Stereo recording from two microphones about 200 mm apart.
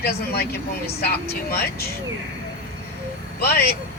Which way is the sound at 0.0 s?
50° left (ahead or behind).